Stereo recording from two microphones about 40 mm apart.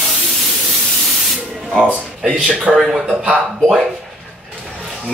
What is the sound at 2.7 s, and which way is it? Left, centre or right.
Speech, right.